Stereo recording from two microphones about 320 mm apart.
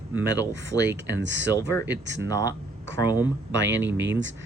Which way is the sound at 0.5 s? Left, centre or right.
Right.